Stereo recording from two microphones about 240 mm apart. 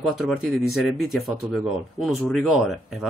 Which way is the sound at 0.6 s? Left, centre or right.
Centre.